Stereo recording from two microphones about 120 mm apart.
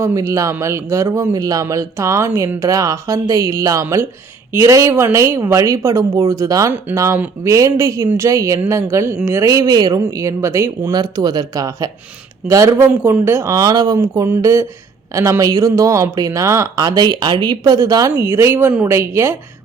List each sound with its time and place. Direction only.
0.0 s speech: 25° right (ahead or behind)
10.9 s speech: 35° right (ahead or behind)